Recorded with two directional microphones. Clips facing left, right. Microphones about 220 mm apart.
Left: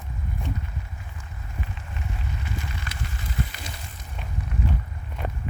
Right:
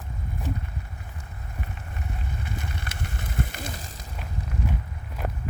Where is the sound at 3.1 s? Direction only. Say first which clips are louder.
Right 2 dB; 55° right (ahead or behind).